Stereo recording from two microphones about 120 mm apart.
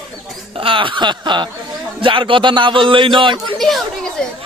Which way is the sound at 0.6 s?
45° right (ahead or behind).